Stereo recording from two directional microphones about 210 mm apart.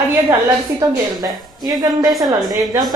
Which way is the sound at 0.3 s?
15° right (ahead or behind).